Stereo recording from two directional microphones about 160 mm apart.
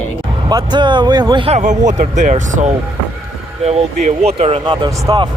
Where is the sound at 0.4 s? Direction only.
25° right (ahead or behind).